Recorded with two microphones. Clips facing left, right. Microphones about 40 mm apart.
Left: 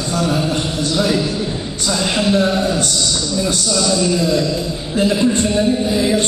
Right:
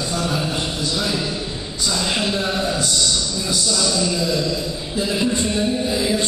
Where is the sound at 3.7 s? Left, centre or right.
Left.